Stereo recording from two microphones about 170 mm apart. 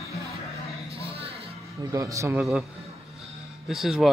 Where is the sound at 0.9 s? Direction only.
35° right (ahead or behind).